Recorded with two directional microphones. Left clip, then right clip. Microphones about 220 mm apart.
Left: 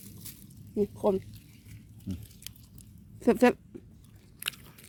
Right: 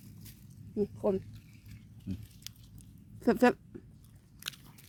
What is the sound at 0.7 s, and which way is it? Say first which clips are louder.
Speech: left 4 dB; 5° left (ahead or behind).